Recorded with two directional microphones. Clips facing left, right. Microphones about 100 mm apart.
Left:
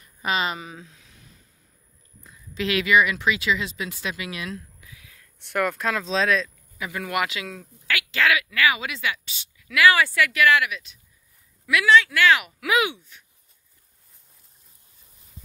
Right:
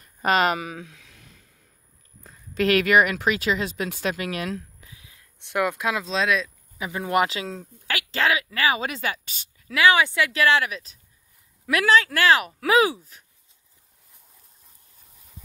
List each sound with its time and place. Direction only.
0.0 s speech: 45° right (ahead or behind); by 1.0 s 70° right (ahead or behind)
2.2 s speech: 50° right (ahead or behind)
4.8 s a sound: 20° right (ahead or behind)
6.0 s speech: 5° right (ahead or behind)
6.8 s speech: 25° right (ahead or behind); by 9.8 s 40° right (ahead or behind)
9.8 s speech: 20° right (ahead or behind)
10.3 s speech: 30° right (ahead or behind)